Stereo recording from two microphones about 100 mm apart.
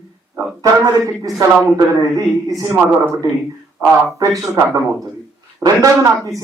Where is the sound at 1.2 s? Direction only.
35° right (ahead or behind).